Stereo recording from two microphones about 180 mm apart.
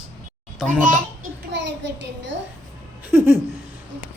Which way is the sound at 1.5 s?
75° right (ahead or behind).